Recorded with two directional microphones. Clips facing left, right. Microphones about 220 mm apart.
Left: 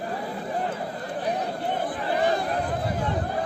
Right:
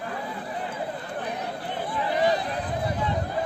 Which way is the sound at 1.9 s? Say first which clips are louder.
Right 3 dB; 50° left (ahead or behind).